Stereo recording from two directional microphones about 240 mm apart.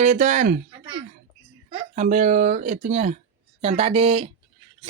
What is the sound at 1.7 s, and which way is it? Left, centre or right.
Speech, right.